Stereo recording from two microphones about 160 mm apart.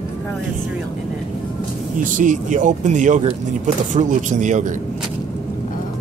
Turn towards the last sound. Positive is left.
turn(degrees=-50)  # may be behind; listen again after turning